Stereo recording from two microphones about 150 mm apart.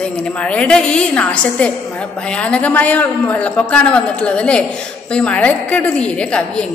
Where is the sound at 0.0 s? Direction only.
5° left (ahead or behind).